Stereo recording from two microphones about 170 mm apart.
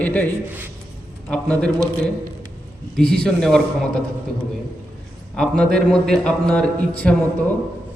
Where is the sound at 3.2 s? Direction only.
5° left (ahead or behind).